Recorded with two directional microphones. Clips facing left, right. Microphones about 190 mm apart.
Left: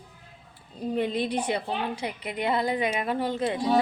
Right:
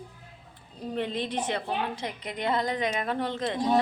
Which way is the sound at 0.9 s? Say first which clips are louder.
Left 3 dB; 10° left (ahead or behind).